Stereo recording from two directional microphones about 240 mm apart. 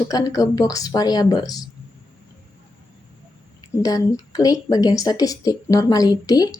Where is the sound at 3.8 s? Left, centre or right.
Centre.